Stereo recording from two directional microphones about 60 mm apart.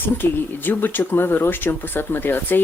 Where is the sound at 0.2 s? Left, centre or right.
Left.